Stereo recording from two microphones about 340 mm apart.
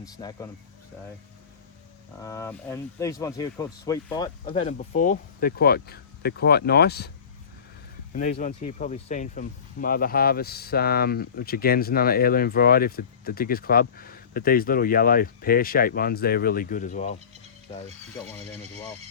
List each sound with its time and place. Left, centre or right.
0.0 s speech: centre
2.2 s speech: centre; by 7.1 s left
8.1 s speech: left